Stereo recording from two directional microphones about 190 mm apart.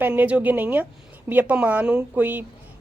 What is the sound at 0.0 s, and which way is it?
Speech, 10° right (ahead or behind).